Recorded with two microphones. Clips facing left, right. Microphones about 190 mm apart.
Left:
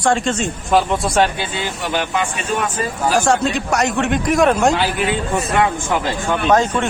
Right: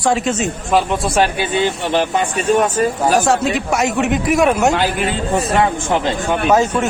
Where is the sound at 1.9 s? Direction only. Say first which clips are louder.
Right 1 dB; 35° right (ahead or behind).